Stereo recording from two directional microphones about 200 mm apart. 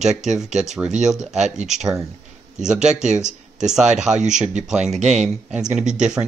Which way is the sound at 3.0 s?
35° right (ahead or behind).